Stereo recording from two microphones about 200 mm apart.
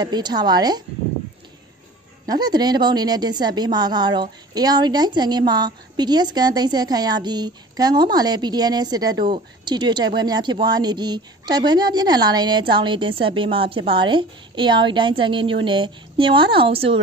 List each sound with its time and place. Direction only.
0.0 s a woman's voice: 20° right (ahead or behind)
2.2 s a woman's voice: 20° right (ahead or behind)